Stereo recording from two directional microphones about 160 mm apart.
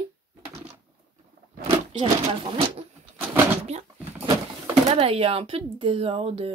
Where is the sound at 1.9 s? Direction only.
40° right (ahead or behind).